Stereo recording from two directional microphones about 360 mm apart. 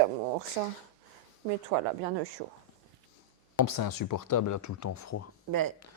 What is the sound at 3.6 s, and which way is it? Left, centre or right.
Speech, left.